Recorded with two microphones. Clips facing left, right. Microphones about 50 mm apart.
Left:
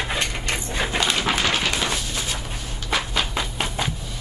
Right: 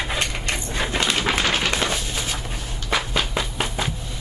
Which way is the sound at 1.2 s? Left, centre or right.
Right.